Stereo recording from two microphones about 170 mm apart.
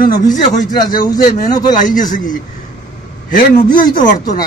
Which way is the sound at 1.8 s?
50° left (ahead or behind).